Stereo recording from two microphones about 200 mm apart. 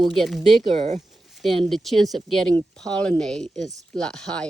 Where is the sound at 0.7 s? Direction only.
35° right (ahead or behind).